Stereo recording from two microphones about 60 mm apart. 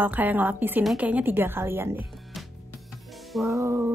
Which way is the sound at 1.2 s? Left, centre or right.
Right.